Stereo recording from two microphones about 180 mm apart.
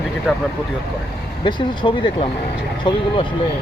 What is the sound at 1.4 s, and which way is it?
Speech, 25° left (ahead or behind).